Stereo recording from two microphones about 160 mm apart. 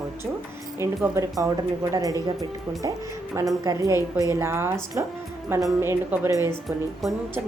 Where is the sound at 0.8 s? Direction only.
15° right (ahead or behind).